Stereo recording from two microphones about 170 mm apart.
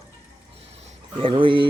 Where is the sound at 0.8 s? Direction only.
30° right (ahead or behind).